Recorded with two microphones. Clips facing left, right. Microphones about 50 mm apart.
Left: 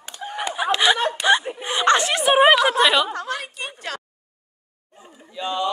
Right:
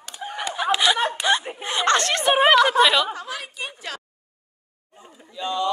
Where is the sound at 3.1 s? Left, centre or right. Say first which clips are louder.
Left 4 dB; left.